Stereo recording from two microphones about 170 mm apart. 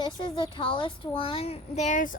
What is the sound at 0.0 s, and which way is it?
A child's voice, 30° left (ahead or behind).